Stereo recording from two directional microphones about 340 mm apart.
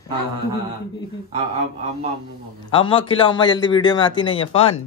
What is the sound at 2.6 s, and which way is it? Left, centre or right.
A man's voice, centre.